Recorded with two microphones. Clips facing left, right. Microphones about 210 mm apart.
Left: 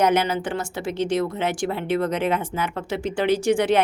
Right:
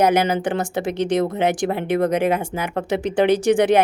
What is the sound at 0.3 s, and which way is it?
A woman's voice, 15° right (ahead or behind).